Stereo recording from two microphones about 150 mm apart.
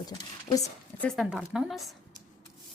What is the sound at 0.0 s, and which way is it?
Speech, 25° left (ahead or behind).